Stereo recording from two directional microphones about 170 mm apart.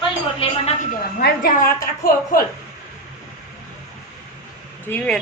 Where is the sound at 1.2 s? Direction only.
55° left (ahead or behind).